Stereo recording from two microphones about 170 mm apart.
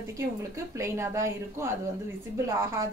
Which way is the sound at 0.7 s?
15° right (ahead or behind).